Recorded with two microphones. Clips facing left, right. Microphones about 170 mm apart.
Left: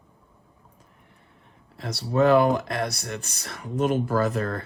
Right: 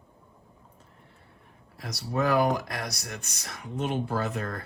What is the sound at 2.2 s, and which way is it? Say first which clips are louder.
Speech: left 6 dB; 60° left (ahead or behind).